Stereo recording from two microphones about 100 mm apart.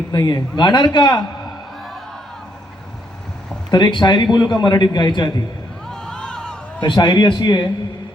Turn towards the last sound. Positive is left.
turn(degrees=45)  # may be behind; listen again after turning